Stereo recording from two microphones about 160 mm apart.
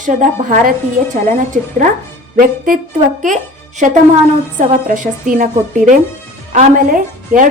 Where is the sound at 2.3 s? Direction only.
60° right (ahead or behind).